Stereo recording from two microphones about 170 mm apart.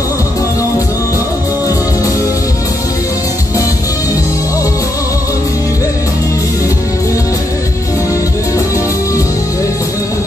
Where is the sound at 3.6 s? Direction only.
20° left (ahead or behind).